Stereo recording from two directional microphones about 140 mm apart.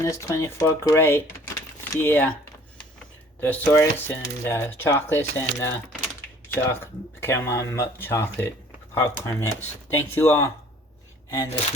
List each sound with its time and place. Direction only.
0.0 s speech: 20° left (ahead or behind)
3.4 s speech: 15° left (ahead or behind)